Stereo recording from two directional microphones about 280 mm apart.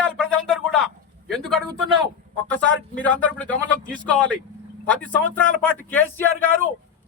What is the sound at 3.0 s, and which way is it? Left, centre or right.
A man's voice, centre.